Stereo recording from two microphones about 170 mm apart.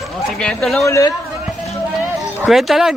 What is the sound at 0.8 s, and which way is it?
Speech, 15° left (ahead or behind).